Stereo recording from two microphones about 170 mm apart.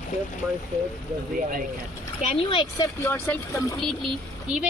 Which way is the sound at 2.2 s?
30° left (ahead or behind).